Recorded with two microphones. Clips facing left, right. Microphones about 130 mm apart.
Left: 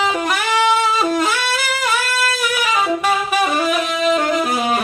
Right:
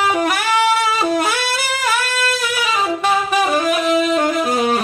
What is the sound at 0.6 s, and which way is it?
Music, 10° right (ahead or behind).